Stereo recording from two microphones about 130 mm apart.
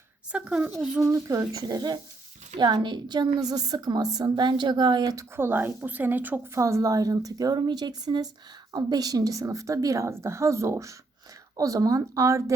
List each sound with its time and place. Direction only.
0.3 s speech: 5° right (ahead or behind)
1.0 s a woman's voice: 25° right (ahead or behind)
5.4 s a woman's voice: 15° right (ahead or behind)